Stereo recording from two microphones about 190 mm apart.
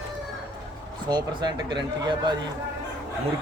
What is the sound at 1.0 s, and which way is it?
Speech, 20° right (ahead or behind).